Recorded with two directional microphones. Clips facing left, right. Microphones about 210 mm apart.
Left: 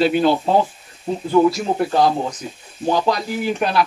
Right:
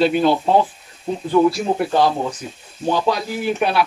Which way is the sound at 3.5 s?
5° right (ahead or behind).